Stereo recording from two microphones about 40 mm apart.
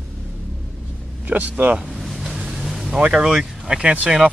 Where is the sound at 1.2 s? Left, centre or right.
Right.